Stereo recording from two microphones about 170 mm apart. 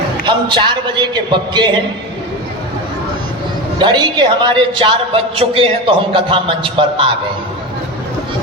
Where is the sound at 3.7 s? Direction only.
25° right (ahead or behind).